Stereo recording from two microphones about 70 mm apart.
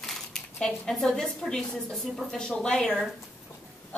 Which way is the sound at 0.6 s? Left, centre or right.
Centre.